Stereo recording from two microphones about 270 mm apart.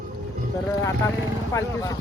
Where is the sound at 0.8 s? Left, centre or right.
Centre.